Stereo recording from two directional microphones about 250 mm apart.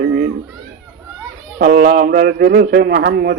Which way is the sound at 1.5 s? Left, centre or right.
Right.